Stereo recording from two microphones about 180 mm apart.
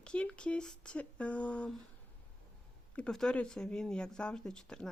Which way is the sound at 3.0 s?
5° left (ahead or behind).